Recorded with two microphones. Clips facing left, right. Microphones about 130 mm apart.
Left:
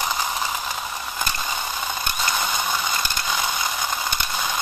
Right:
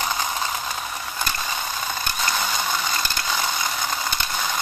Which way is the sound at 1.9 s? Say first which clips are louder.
Even; 15° left (ahead or behind).